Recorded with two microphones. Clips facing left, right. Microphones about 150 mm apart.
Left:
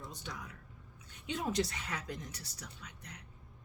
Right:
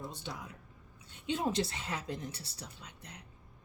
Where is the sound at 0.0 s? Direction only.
30° right (ahead or behind).